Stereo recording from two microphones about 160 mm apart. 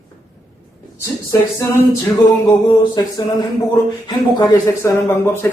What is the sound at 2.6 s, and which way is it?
Speech, 25° left (ahead or behind).